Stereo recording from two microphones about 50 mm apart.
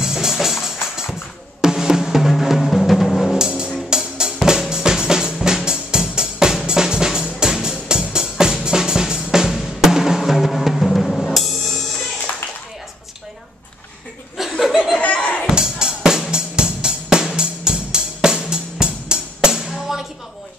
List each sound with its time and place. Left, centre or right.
0.0 s music: centre
1.6 s drum: centre
3.3 s music: centre
3.9 s drum: centre
10.9 s drum kit: centre
12.3 s a sound: left
14.4 s chuckle: centre
15.0 s a sound: left
15.5 s music: centre